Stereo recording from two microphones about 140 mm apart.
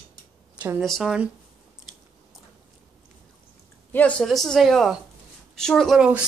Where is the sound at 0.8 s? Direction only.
Centre (ahead or behind).